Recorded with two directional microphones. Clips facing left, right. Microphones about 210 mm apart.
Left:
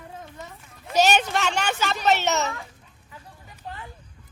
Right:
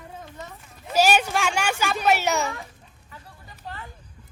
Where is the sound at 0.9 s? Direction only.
10° right (ahead or behind).